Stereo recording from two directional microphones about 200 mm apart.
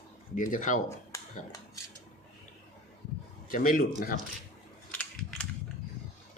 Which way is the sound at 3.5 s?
45° left (ahead or behind).